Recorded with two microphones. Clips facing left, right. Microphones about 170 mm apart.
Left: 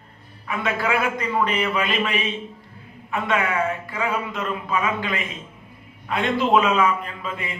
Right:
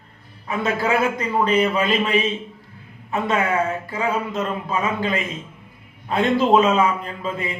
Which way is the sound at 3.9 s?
40° right (ahead or behind).